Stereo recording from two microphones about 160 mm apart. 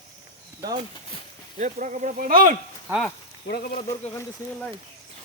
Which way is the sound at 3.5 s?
80° left.